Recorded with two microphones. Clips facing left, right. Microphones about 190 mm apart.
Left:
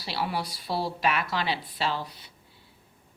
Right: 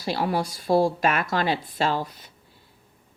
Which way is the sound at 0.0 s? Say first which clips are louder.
Right 6 dB; 45° right (ahead or behind).